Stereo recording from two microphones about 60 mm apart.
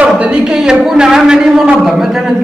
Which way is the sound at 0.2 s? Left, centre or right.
Right.